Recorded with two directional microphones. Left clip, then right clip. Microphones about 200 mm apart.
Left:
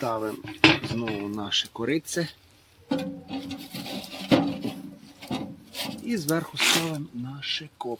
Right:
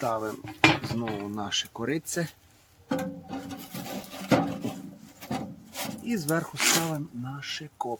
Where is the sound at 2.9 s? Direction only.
Centre (ahead or behind).